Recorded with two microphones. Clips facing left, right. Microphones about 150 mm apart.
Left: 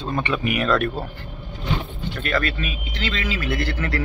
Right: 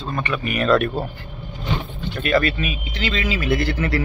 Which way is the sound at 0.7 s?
5° right (ahead or behind).